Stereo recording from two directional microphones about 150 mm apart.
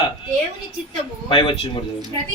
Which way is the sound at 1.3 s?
30° left (ahead or behind).